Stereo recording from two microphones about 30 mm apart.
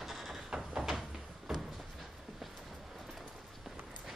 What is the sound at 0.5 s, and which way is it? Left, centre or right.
Door, centre.